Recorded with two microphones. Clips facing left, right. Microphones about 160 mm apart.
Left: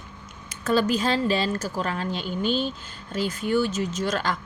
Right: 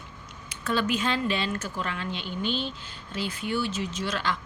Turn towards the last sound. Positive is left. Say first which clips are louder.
# left 4 dB
turn(degrees=45)  # may be behind; listen again after turning